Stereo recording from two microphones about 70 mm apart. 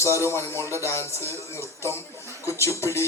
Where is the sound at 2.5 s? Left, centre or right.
Left.